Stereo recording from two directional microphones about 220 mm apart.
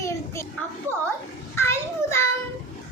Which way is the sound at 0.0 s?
15° left (ahead or behind).